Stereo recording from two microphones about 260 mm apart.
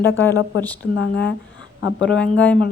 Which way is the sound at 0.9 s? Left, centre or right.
Left.